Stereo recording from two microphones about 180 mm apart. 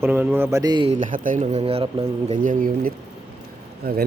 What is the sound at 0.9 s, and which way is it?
Speech, 45° right (ahead or behind).